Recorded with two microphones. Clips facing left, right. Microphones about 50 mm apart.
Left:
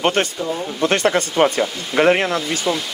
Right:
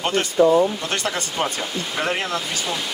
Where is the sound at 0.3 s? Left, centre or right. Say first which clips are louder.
Right 10 dB; right.